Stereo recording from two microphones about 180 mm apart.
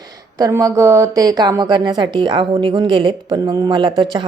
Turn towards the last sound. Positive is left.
turn(degrees=-25)  # may be behind; listen again after turning